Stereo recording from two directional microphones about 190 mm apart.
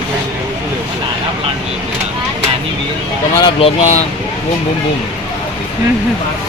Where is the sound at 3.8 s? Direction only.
35° left (ahead or behind).